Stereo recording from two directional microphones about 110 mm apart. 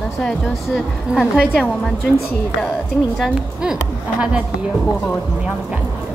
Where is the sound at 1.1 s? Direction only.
10° right (ahead or behind).